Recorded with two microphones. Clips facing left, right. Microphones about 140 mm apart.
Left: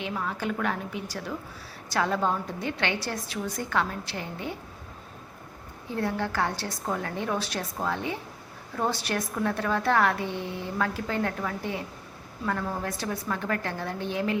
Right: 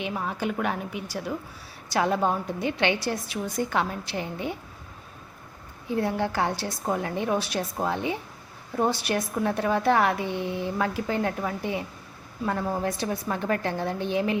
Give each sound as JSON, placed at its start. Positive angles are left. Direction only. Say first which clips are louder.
{"t": 0.0, "sound": "a woman's voice", "louder": "right 2 dB", "side_deg": -20}
{"t": 5.9, "sound": "a woman's voice", "louder": "right 3 dB", "side_deg": -15}